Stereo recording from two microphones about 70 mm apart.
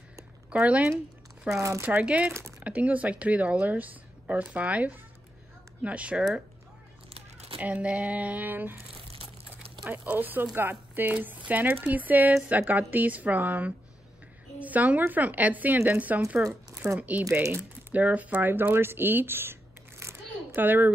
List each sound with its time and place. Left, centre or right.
0.5 s speech: centre
7.5 s speech: right
9.8 s speech: right
16.8 s speech: right
17.4 s speech: right
17.9 s speech: right
20.6 s speech: right